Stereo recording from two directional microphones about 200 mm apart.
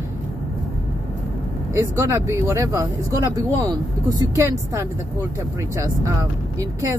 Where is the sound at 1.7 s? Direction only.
15° right (ahead or behind).